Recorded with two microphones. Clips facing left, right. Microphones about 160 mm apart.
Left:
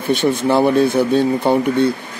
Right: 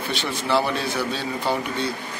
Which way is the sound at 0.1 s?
50° left (ahead or behind).